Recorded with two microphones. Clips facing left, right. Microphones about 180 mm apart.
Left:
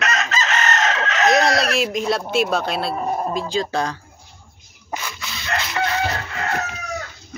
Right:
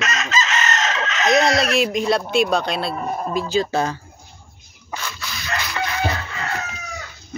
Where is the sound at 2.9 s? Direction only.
25° left (ahead or behind).